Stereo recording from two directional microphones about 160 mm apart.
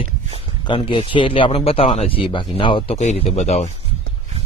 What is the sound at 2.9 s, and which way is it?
Speech, 45° left (ahead or behind).